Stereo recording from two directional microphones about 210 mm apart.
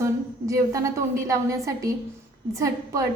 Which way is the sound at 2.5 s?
15° right (ahead or behind).